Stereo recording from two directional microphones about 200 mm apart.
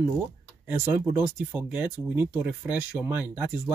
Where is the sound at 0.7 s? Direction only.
10° right (ahead or behind).